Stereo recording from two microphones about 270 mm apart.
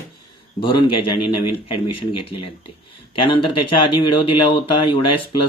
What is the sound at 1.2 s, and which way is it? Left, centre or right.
Speech, left.